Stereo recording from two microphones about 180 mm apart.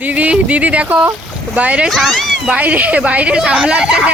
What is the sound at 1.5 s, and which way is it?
Speech, 5° right (ahead or behind).